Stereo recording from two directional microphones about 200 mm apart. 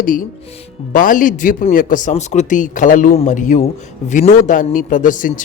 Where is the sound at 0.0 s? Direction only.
45° left (ahead or behind).